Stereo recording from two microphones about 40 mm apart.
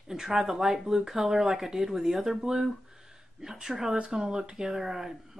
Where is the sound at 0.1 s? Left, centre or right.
Centre.